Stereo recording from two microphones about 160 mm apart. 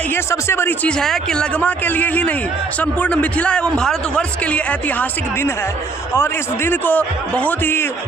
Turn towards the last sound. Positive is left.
turn(degrees=15)  # may be behind; listen again after turning